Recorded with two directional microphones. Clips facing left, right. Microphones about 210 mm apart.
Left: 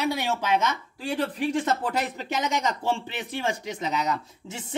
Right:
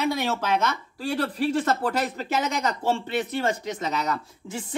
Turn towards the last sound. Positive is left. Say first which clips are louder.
# right 4 dB
turn(degrees=20)  # may be behind; listen again after turning